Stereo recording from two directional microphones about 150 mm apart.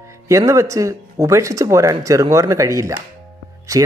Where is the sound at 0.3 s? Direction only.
20° right (ahead or behind).